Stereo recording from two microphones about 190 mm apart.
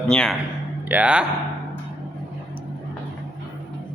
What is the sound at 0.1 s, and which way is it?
Speech, 5° left (ahead or behind).